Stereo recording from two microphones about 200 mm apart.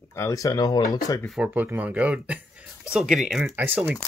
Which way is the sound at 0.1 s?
15° left (ahead or behind).